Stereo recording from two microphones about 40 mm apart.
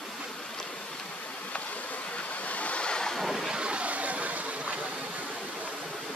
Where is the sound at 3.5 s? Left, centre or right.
Right.